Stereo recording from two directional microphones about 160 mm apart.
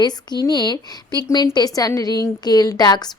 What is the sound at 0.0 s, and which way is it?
Speech, 25° left (ahead or behind).